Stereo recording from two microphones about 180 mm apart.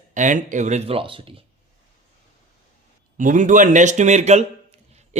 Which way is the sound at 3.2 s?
45° right (ahead or behind).